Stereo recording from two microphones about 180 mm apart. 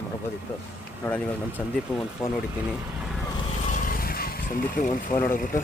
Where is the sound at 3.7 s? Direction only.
45° left (ahead or behind).